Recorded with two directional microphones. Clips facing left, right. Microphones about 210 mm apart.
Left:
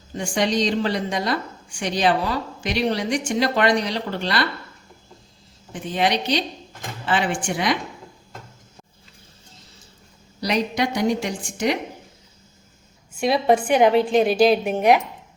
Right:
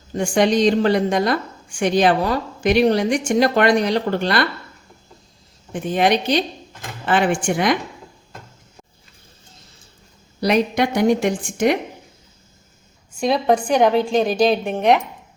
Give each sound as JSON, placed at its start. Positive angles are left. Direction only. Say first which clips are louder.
{"t": 0.2, "sound": "a woman's voice", "louder": "right 5 dB", "side_deg": -50}
{"t": 5.7, "sound": "a woman's voice", "louder": "right 4 dB", "side_deg": -50}
{"t": 10.4, "sound": "a woman's voice", "louder": "right 5 dB", "side_deg": -55}
{"t": 13.1, "sound": "a woman's voice", "louder": "right 1 dB", "side_deg": 5}